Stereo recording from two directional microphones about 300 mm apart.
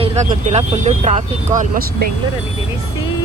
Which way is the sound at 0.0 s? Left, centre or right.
Right.